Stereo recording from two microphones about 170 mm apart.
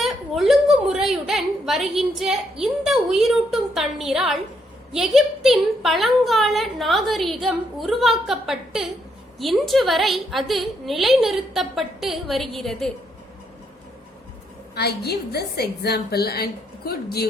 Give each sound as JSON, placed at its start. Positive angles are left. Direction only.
{"t": 0.0, "sound": "a woman's voice", "side_deg": 0}
{"t": 14.8, "sound": "a woman's voice", "side_deg": 70}